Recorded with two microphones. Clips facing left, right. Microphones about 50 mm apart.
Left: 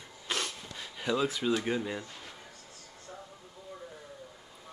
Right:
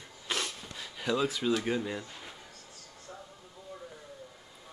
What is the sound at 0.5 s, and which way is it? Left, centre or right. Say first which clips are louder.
Speech: even; centre.